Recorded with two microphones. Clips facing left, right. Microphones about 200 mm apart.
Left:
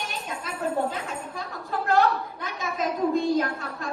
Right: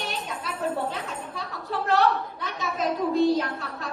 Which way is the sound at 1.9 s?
50° left (ahead or behind).